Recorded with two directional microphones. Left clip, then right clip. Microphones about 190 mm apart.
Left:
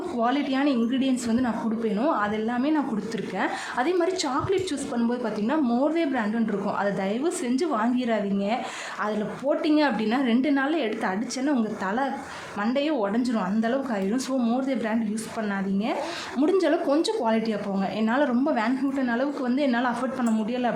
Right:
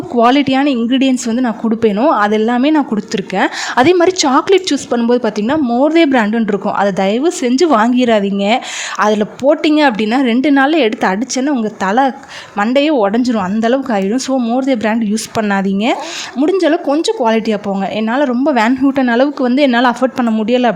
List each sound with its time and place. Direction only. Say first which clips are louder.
0.2 s speech: right 14 dB; 45° right (ahead or behind)
5.6 s speech: right 13 dB; 35° right (ahead or behind)
5.9 s speech: right 15 dB; 50° right (ahead or behind)
16.4 s speech: right 10 dB; 40° right (ahead or behind)